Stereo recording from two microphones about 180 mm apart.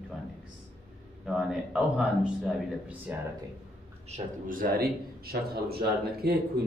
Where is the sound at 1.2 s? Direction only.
5° right (ahead or behind).